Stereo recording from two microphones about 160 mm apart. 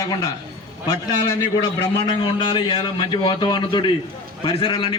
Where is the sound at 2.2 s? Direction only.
30° left (ahead or behind).